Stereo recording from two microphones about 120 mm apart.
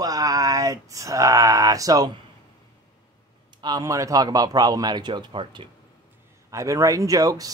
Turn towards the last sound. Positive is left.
turn(degrees=-30)  # may be behind; listen again after turning